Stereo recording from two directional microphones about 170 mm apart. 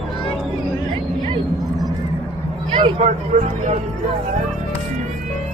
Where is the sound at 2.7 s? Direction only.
35° right (ahead or behind).